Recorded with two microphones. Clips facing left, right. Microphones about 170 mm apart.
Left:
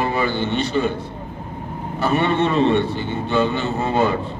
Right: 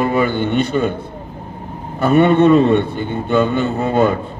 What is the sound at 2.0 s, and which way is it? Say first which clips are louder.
Mantra: right 7 dB; 55° right (ahead or behind).